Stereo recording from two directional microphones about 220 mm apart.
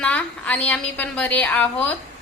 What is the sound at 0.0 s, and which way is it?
A woman's voice, 5° left (ahead or behind).